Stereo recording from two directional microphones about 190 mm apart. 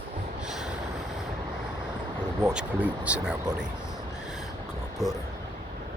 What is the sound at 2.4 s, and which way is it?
Speech, 5° right (ahead or behind).